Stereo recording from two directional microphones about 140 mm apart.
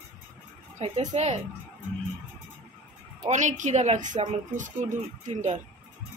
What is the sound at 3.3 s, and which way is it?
A woman's voice, 60° right (ahead or behind).